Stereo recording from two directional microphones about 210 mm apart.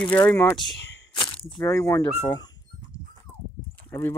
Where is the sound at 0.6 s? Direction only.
55° left (ahead or behind).